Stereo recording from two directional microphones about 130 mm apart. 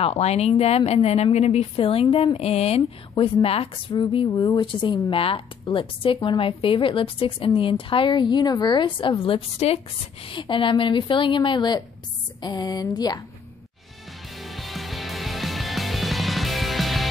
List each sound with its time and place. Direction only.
0.0 s speech: 55° left (ahead or behind); by 13.2 s 30° left (ahead or behind)
14.3 s music: centre (ahead or behind)